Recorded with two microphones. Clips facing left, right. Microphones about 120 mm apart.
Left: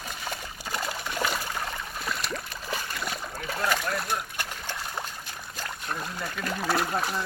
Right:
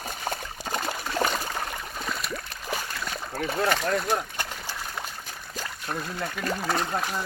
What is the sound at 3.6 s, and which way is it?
Speech, 65° right (ahead or behind).